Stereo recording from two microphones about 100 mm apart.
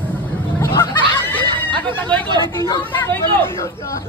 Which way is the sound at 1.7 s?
20° left (ahead or behind).